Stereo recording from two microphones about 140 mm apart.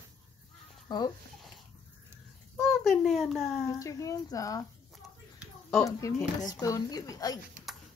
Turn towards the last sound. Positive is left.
turn(degrees=25)  # may be behind; listen again after turning